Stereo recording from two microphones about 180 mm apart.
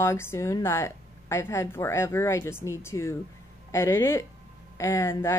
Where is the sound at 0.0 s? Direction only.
15° left (ahead or behind).